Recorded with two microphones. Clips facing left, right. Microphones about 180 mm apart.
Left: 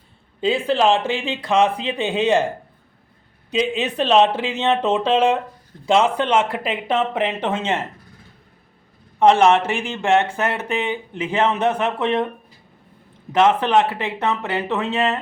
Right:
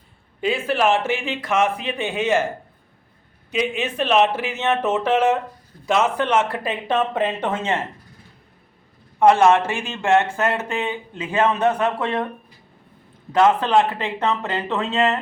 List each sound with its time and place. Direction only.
0.4 s speech: 25° left (ahead or behind)
3.5 s speech: 30° left (ahead or behind)
9.1 s speech: 20° left (ahead or behind)
13.3 s speech: 20° left (ahead or behind)